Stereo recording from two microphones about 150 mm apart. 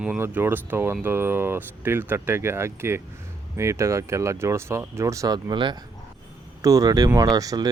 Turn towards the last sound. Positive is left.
turn(degrees=-25)  # may be behind; listen again after turning